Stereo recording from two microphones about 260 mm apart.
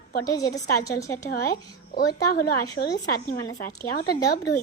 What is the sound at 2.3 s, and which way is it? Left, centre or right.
A woman's voice, left.